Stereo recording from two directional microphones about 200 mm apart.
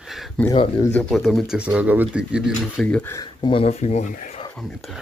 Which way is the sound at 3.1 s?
20° left (ahead or behind).